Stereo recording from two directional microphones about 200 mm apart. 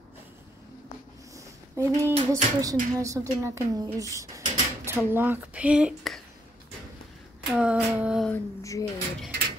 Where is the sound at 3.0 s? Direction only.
15° right (ahead or behind).